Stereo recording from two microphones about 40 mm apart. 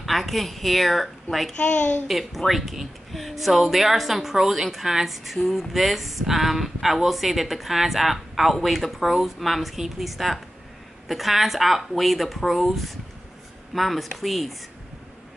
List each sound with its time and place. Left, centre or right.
0.0 s speech: centre
1.6 s a child's voice: left
2.0 s speech: centre